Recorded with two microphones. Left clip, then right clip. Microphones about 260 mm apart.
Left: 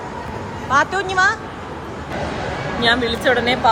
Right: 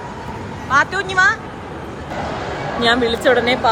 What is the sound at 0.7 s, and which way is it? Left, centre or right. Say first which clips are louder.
Speech: right 1 dB; centre.